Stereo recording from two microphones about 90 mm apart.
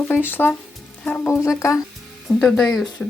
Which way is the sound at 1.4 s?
35° left (ahead or behind).